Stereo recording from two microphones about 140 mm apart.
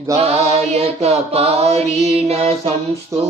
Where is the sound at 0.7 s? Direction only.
45° right (ahead or behind).